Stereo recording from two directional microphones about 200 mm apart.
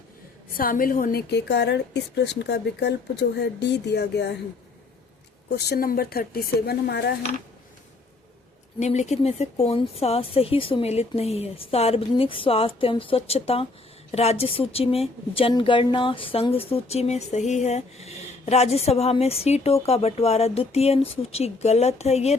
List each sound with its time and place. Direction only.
0.5 s a woman's voice: 45° left (ahead or behind)
5.5 s a woman's voice: 55° left (ahead or behind)
8.8 s speech: 35° left (ahead or behind)